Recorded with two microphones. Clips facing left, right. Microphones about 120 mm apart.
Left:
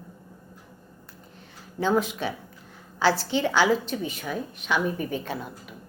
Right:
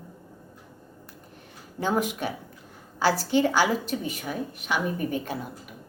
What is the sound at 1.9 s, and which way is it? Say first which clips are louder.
Speech: left 1 dB; 45° right (ahead or behind).